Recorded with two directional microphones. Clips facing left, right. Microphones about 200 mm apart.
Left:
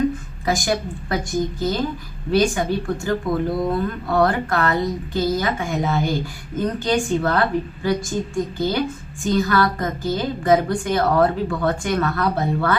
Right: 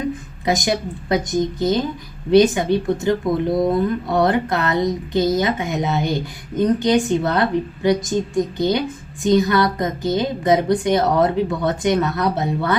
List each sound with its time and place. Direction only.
0.4 s a woman's voice: 20° right (ahead or behind)